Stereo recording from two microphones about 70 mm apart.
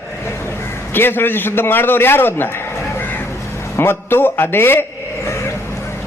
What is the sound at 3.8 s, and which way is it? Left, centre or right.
A man's voice, left.